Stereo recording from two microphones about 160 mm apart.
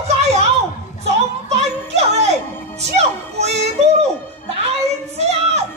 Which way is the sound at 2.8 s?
45° right (ahead or behind).